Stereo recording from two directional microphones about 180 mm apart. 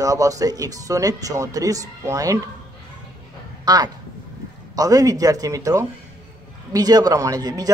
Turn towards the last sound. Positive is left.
turn(degrees=-20)  # may be behind; listen again after turning